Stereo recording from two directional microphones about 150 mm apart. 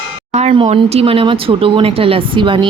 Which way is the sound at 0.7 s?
45° right (ahead or behind).